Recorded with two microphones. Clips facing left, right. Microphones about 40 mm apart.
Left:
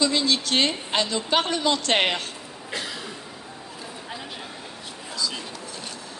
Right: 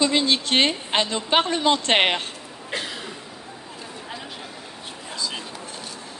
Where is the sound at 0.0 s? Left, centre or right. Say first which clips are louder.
Right 2 dB; right.